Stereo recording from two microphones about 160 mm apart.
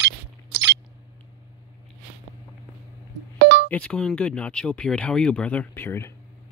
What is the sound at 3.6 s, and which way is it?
Speech, 10° left (ahead or behind).